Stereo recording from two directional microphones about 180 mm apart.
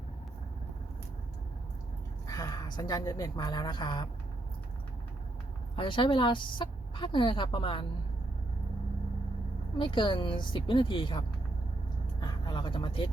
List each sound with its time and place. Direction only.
2.2 s a woman's voice: 20° left (ahead or behind)
5.7 s a woman's voice: 30° left (ahead or behind)
9.7 s a woman's voice: 25° left (ahead or behind)